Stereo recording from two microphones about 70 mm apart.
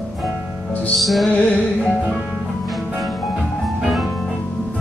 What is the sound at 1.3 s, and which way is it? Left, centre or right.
Music, centre.